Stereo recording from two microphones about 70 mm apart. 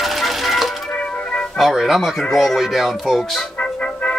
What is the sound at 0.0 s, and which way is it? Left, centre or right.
Music, centre.